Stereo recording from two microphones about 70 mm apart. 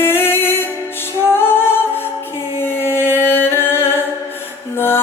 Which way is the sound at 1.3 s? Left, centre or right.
Left.